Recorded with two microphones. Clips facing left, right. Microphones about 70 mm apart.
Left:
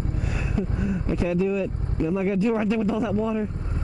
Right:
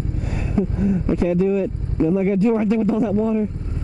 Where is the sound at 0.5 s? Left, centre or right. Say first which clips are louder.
Right 8 dB; right.